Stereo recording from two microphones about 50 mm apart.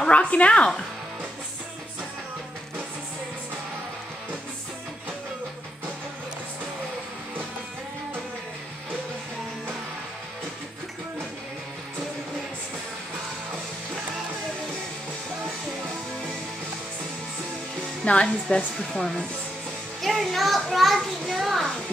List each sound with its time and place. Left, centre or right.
0.1 s a woman's voice: left
18.0 s a woman's voice: left
20.0 s a child's voice: centre